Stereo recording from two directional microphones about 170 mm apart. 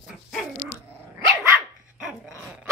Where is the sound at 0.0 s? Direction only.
Centre (ahead or behind).